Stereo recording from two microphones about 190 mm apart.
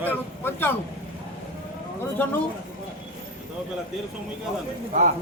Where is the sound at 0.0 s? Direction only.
10° left (ahead or behind).